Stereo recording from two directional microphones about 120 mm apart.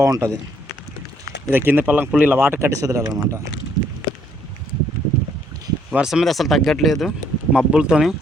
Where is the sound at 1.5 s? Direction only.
15° right (ahead or behind).